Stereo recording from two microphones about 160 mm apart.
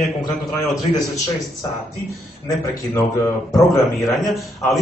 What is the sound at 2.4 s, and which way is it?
Speech, 20° left (ahead or behind).